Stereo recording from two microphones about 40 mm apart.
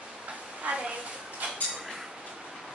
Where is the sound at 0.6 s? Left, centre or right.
Right.